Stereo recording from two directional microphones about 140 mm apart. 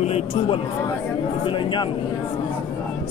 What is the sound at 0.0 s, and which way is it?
Speech, 45° left (ahead or behind).